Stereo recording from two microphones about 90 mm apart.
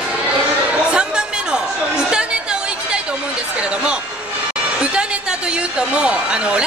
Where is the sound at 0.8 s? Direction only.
10° right (ahead or behind).